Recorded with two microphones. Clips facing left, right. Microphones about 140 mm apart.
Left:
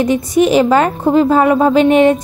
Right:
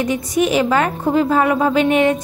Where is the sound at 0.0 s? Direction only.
30° left (ahead or behind).